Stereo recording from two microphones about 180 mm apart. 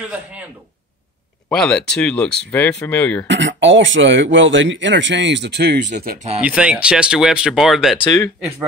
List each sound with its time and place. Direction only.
1.5 s speech: 5° left (ahead or behind)
3.3 s speech: 90° right; by 5.8 s 65° right (ahead or behind)
5.9 s speech: 40° right (ahead or behind)
6.4 s speech: 5° right (ahead or behind)